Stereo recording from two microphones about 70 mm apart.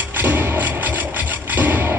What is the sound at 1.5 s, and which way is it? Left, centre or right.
Music, right.